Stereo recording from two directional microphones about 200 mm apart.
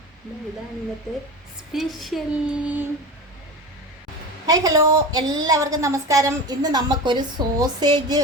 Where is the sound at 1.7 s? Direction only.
Centre (ahead or behind).